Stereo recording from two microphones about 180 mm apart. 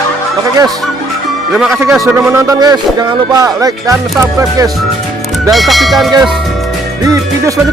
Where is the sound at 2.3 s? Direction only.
20° right (ahead or behind).